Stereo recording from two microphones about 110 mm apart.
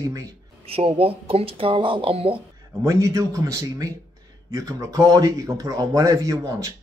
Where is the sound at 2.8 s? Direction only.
30° right (ahead or behind).